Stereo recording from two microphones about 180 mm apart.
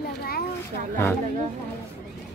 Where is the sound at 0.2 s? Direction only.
60° left (ahead or behind).